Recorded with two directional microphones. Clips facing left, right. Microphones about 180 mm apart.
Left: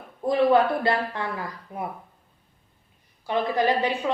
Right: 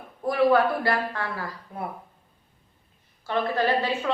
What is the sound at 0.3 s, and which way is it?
A man's voice, 20° left (ahead or behind).